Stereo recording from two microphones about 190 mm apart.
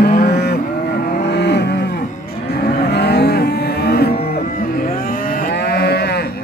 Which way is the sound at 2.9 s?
60° left (ahead or behind).